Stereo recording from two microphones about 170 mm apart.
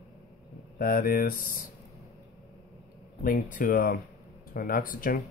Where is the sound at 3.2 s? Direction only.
55° left (ahead or behind).